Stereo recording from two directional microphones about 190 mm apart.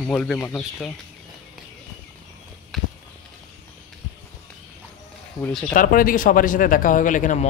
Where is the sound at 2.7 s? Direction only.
Centre (ahead or behind).